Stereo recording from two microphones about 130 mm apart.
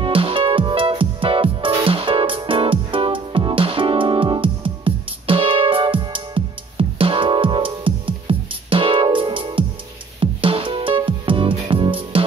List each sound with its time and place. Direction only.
0.0 s music: 45° right (ahead or behind)